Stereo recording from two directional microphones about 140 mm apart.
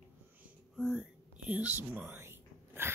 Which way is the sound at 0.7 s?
5° right (ahead or behind).